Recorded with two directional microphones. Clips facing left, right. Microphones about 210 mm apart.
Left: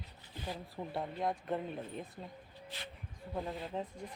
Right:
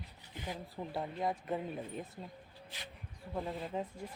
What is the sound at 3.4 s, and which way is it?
Speech, centre (ahead or behind).